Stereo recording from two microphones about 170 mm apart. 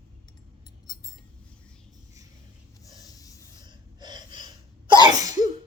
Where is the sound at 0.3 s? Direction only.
25° left (ahead or behind).